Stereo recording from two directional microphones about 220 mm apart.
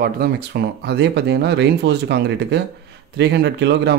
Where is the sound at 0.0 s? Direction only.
45° right (ahead or behind).